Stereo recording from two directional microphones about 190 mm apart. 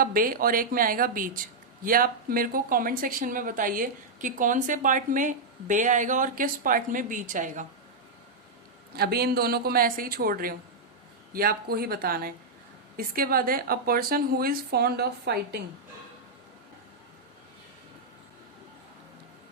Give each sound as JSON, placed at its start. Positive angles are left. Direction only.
{"t": 0.0, "sound": "speech", "side_deg": -50}
{"t": 9.0, "sound": "speech", "side_deg": -55}